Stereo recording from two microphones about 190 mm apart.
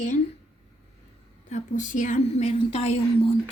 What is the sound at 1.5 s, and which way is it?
A woman's voice, 40° left (ahead or behind).